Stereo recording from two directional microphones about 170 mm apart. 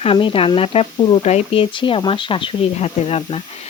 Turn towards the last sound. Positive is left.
turn(degrees=35)  # may be behind; listen again after turning